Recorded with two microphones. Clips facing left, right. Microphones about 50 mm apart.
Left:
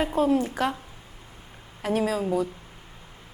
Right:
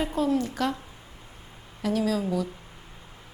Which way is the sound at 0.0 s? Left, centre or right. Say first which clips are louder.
Left 3 dB; left.